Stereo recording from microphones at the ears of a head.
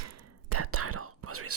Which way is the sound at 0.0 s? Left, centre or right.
Right.